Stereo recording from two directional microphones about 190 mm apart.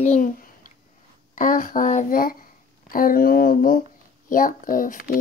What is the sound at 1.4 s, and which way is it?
Speech, 45° left (ahead or behind).